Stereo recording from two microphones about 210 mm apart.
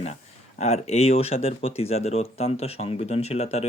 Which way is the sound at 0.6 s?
30° left (ahead or behind).